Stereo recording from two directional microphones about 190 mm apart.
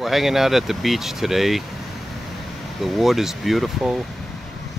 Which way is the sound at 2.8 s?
Centre (ahead or behind).